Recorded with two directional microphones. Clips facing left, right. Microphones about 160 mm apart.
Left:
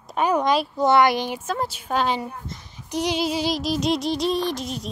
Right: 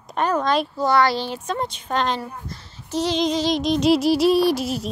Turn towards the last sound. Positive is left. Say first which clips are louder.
# right 7 dB
turn(degrees=-5)  # may be behind; listen again after turning